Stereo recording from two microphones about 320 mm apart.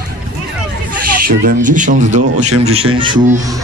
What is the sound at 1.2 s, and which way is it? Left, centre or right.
Speech, right.